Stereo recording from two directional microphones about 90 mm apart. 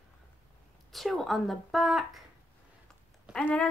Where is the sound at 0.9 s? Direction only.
Centre (ahead or behind).